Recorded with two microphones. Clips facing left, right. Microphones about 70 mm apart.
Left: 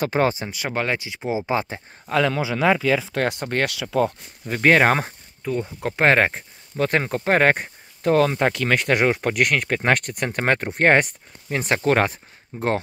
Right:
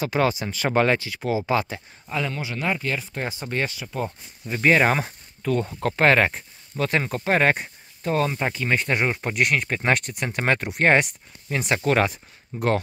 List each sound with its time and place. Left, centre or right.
0.0 s speech: left
0.7 s speech: centre
0.9 s speech: centre
2.0 s speech: left
3.7 s speech: left
4.5 s speech: left
5.4 s speech: centre
5.9 s speech: left